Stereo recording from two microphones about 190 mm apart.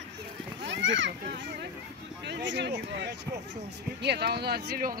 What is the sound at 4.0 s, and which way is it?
Speech, 60° right (ahead or behind).